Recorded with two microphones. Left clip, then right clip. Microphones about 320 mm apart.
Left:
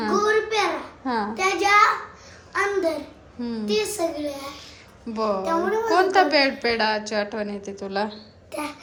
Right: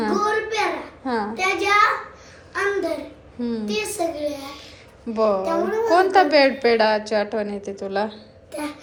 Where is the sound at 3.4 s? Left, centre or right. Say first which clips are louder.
Left 1 dB; centre.